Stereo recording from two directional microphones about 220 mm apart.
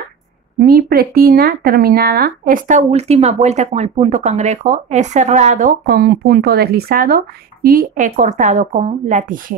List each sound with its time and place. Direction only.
0.6 s speech: 45° right (ahead or behind)